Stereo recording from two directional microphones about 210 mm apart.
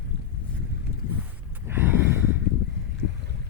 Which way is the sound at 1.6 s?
10° right (ahead or behind).